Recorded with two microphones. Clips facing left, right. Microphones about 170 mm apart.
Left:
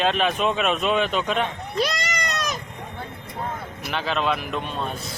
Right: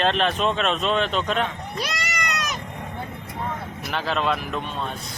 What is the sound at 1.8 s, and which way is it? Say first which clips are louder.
Goat: left 5 dB; 35° left (ahead or behind).